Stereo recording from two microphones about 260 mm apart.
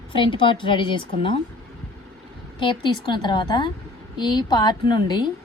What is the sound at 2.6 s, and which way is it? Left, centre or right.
A woman's voice, centre.